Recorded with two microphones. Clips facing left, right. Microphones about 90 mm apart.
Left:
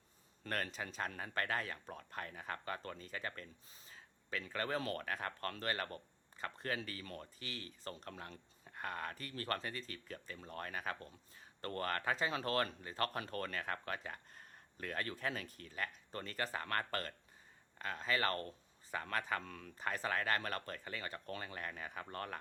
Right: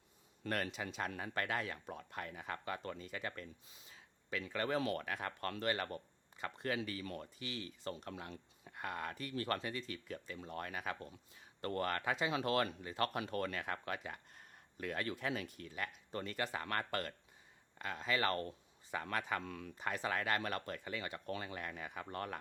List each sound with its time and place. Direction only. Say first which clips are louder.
0.4 s speech: right 2 dB; 40° left (ahead or behind)
18.3 s speech: right 2 dB; 30° right (ahead or behind)
19.1 s speech: even; 40° left (ahead or behind)